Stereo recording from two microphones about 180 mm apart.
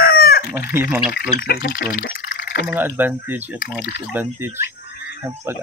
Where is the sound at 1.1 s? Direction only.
60° left (ahead or behind).